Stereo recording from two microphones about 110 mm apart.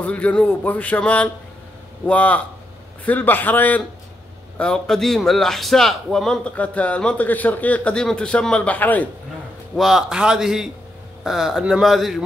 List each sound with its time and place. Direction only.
0.0 s a man's voice: 15° left (ahead or behind)
9.8 s speech: 5° right (ahead or behind)